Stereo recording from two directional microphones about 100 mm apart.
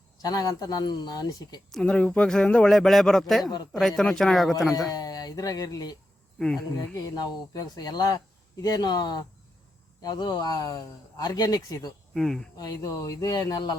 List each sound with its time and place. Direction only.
0.2 s speech: 40° left (ahead or behind)
1.7 s speech: 10° left (ahead or behind)
3.4 s speech: 40° left (ahead or behind)
3.7 s speech: 5° left (ahead or behind)
4.7 s speech: 40° left (ahead or behind)
7.5 s speech: 40° left (ahead or behind)
12.1 s speech: 5° left (ahead or behind)
12.5 s speech: 40° left (ahead or behind)